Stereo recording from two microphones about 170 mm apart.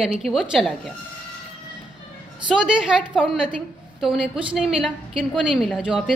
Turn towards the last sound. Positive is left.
turn(degrees=-5)  # may be behind; listen again after turning